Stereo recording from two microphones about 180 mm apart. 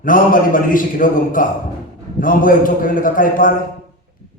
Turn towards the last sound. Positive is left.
turn(degrees=50)  # may be behind; listen again after turning